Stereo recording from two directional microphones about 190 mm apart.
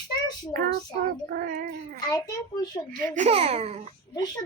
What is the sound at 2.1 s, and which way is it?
Speech, 20° left (ahead or behind).